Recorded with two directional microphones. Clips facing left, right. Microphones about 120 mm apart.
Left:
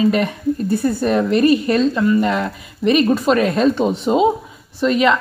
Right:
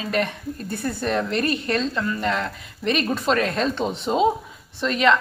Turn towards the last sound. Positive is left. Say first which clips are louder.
# left 4 dB
turn(degrees=5)  # may be behind; listen again after turning